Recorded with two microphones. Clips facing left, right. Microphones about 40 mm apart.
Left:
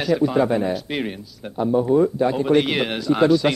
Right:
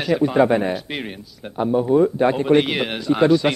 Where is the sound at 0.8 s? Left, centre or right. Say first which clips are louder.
Left 3 dB; centre.